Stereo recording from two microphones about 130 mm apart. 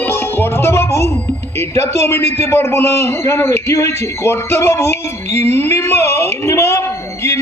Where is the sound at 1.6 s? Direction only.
20° left (ahead or behind).